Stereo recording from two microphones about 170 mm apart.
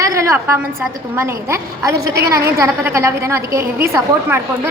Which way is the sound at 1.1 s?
15° right (ahead or behind).